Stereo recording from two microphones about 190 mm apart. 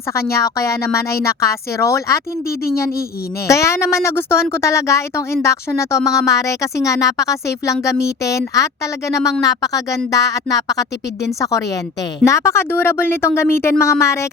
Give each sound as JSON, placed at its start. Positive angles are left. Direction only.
{"t": 0.1, "sound": "speech", "side_deg": 15}
{"t": 3.4, "sound": "speech", "side_deg": 15}
{"t": 12.2, "sound": "speech", "side_deg": 15}